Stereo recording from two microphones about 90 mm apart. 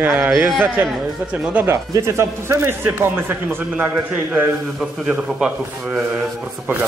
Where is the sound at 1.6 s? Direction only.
30° right (ahead or behind).